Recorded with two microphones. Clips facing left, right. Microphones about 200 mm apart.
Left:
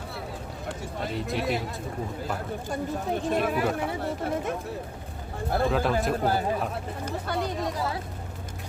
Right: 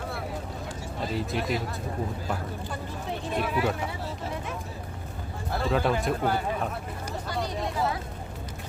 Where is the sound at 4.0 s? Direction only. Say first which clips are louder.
Left 5 dB; 60° left (ahead or behind).